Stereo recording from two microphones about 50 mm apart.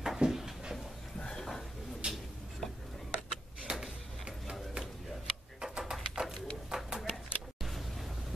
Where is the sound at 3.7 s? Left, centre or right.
Right.